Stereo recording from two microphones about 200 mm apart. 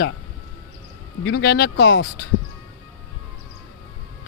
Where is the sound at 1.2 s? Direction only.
65° left (ahead or behind).